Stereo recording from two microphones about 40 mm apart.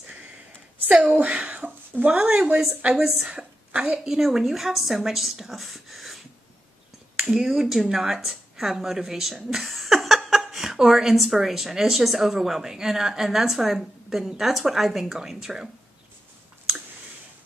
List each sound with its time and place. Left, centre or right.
0.9 s a woman's voice: centre
1.4 s a sound: right
2.0 s a woman's voice: right
3.3 s a sound: right
3.9 s a woman's voice: centre
7.2 s a woman's voice: centre